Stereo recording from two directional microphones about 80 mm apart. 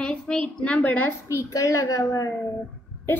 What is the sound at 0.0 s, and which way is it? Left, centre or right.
A woman's voice, centre.